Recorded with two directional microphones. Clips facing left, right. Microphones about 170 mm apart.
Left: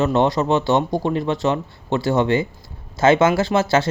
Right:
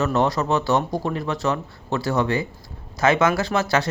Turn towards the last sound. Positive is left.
turn(degrees=25)  # may be behind; listen again after turning